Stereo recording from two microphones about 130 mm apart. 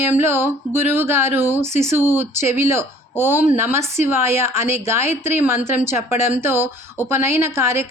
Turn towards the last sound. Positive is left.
turn(degrees=-20)  # may be behind; listen again after turning